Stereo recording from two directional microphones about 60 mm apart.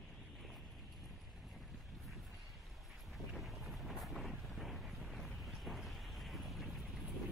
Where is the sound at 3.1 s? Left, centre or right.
Centre.